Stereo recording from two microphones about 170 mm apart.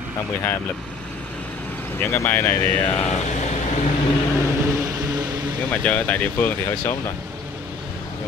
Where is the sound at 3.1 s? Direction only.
45° left (ahead or behind).